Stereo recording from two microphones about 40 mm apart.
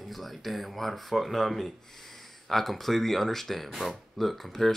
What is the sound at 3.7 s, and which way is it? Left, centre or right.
Speech, centre.